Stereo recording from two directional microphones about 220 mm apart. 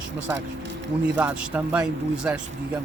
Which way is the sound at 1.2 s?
5° right (ahead or behind).